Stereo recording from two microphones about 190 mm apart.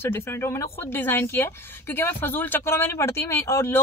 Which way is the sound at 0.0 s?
15° left (ahead or behind).